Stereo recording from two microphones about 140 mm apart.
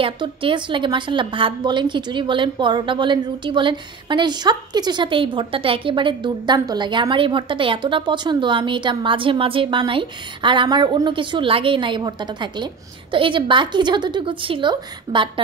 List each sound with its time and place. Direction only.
0.0 s a woman's voice: 40° right (ahead or behind)